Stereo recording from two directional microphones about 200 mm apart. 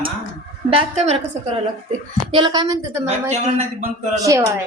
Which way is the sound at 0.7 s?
30° right (ahead or behind).